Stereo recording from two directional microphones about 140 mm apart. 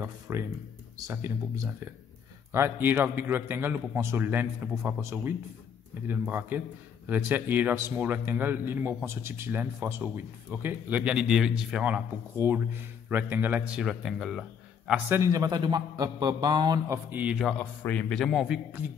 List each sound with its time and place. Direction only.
0.0 s a man's voice: 20° right (ahead or behind); by 14.4 s centre (ahead or behind)
15.0 s a man's voice: 20° right (ahead or behind)
17.1 s a man's voice: 10° right (ahead or behind)
17.5 s a man's voice: 10° left (ahead or behind); by 18.9 s 10° right (ahead or behind)